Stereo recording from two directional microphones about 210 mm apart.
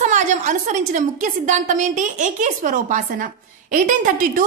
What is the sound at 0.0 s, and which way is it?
A woman's voice, 35° right (ahead or behind).